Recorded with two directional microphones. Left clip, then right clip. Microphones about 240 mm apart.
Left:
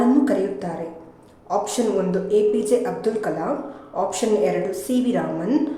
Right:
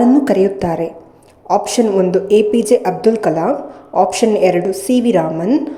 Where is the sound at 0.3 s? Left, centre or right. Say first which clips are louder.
Right 9 dB; right.